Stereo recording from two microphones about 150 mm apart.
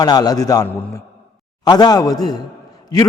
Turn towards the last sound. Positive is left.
turn(degrees=25)  # may be behind; listen again after turning